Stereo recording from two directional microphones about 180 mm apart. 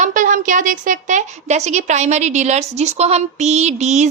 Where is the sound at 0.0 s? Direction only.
45° right (ahead or behind).